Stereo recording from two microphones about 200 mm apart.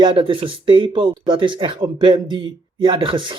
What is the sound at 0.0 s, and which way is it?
A man's voice, 25° right (ahead or behind).